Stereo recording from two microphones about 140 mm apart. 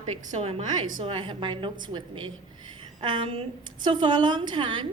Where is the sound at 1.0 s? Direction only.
35° right (ahead or behind).